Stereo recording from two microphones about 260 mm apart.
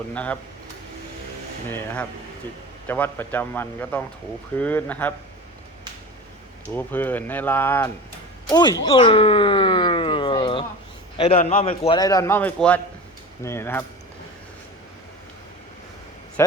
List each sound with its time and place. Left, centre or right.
0.1 s speech: centre
2.8 s a man's voice: centre
6.7 s a man's voice: centre
8.4 s a sound: centre
11.2 s a man's voice: left
16.4 s speech: centre